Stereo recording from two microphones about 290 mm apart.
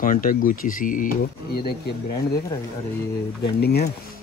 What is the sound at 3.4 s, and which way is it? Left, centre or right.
Speech, left.